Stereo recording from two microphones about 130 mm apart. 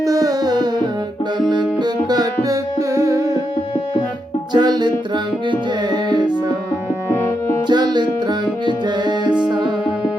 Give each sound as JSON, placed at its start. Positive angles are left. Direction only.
{"t": 0.0, "sound": "music", "side_deg": -25}
{"t": 4.5, "sound": "music", "side_deg": -35}
{"t": 7.7, "sound": "music", "side_deg": -35}